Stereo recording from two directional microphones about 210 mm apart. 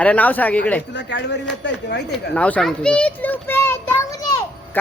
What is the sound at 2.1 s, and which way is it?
A child's voice, 5° left (ahead or behind).